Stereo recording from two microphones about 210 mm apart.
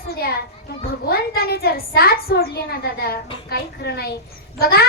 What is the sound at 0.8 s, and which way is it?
A child's voice, 45° left (ahead or behind).